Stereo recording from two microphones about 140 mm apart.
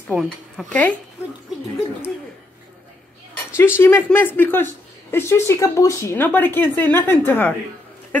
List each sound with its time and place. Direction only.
0.1 s speech: 5° right (ahead or behind)
0.7 s speech: 10° left (ahead or behind)
3.5 s speech: 15° left (ahead or behind)